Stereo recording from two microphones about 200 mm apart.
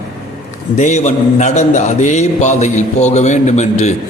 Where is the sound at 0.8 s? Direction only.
35° left (ahead or behind).